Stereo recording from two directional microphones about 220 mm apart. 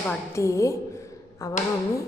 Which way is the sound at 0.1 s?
15° left (ahead or behind).